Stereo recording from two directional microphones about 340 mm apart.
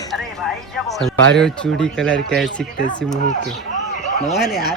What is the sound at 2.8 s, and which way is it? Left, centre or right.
Speech, left.